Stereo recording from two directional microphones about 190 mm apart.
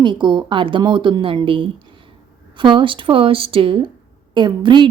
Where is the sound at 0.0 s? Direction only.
25° right (ahead or behind).